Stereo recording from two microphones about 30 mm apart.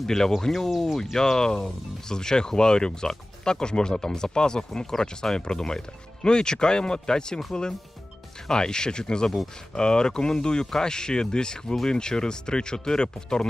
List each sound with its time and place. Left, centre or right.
0.0 s speech: centre
1.1 s speech: centre
8.4 s speech: left